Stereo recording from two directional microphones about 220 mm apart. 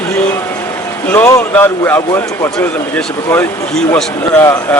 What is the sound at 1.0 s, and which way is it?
A man's voice, 10° left (ahead or behind).